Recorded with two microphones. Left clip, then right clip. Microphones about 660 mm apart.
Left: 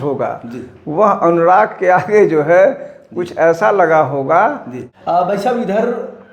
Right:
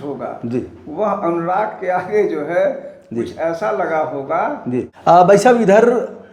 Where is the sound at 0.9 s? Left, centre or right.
Left.